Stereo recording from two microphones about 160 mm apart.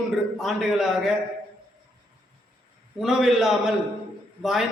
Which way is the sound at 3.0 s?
Centre (ahead or behind).